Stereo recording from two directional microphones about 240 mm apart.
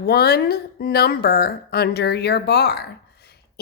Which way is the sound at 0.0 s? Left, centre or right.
Left.